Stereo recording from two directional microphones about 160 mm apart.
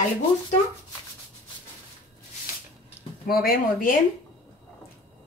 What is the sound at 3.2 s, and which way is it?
Speech, 65° left (ahead or behind).